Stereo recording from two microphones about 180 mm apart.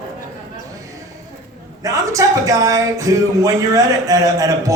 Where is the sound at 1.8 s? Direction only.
20° right (ahead or behind).